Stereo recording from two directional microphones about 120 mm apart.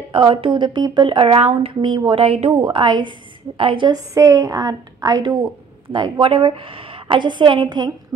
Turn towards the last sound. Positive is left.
turn(degrees=-40)  # may be behind; listen again after turning